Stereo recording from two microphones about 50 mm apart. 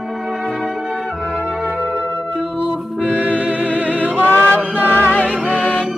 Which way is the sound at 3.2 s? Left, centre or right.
Right.